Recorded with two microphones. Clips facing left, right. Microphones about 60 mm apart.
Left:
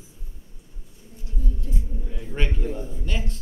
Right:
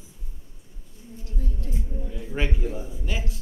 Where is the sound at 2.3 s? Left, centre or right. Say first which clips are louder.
Even; centre.